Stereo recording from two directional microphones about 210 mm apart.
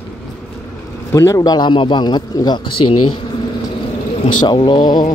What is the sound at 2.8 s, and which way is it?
Speech, 90° left.